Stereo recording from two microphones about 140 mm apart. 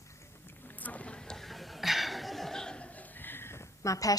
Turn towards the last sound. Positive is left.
turn(degrees=25)  # may be behind; listen again after turning